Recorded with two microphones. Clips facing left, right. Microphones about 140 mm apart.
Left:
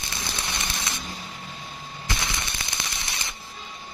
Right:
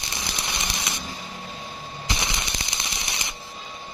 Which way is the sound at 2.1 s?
20° right (ahead or behind).